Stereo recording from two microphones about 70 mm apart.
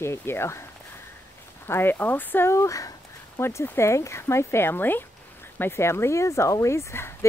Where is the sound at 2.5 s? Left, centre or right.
Left.